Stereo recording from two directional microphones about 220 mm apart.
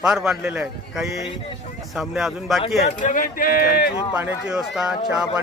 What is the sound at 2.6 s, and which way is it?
Speech, 35° left (ahead or behind).